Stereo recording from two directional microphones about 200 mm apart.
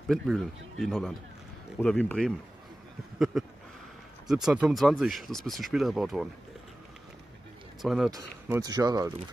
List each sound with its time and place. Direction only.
0.1 s speech: centre (ahead or behind)
3.3 s speech: centre (ahead or behind)
7.8 s speech: centre (ahead or behind)
8.1 s speech: 15° right (ahead or behind)